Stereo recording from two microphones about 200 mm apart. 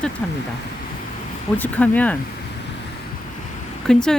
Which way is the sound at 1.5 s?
10° left (ahead or behind).